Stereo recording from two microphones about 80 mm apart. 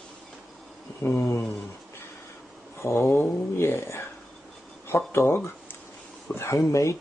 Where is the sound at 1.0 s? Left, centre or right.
Left.